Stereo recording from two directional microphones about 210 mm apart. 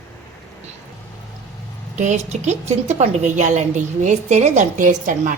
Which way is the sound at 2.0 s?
35° right (ahead or behind).